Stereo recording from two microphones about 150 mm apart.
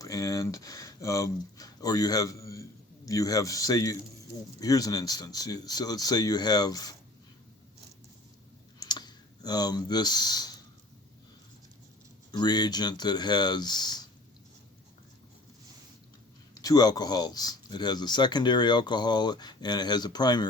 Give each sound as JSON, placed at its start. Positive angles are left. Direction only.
{"t": 0.0, "sound": "speech", "side_deg": 20}
{"t": 8.8, "sound": "clicking", "side_deg": 30}
{"t": 12.3, "sound": "speech", "side_deg": 30}
{"t": 16.6, "sound": "speech", "side_deg": 25}